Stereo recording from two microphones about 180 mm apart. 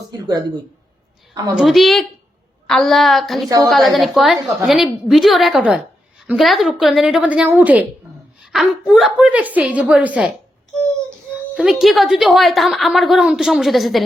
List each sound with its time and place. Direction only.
0.1 s a sound: 20° right (ahead or behind)
1.3 s a woman's voice: 20° right (ahead or behind)
1.5 s a woman's voice: centre (ahead or behind)
8.4 s a sound: 5° right (ahead or behind)
8.9 s speech: 5° right (ahead or behind)
11.3 s a woman's voice: 5° right (ahead or behind)